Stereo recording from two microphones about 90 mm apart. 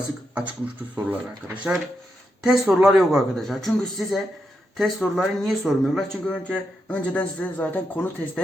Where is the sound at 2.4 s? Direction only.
5° right (ahead or behind); by 8.1 s 20° left (ahead or behind).